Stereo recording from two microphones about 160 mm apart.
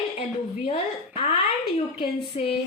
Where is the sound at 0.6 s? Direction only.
40° left (ahead or behind).